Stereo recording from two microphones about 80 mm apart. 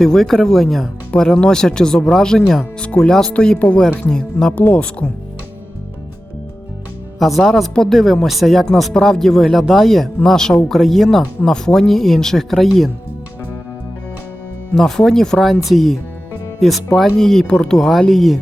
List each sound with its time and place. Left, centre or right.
0.0 s speech: centre
4.5 s speech: centre
7.2 s speech: centre
14.8 s speech: centre